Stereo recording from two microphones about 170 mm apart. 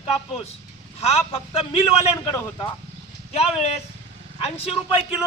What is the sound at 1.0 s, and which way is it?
Speech, 35° left (ahead or behind).